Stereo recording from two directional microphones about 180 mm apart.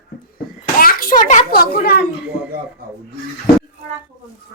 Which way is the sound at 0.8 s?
55° left (ahead or behind).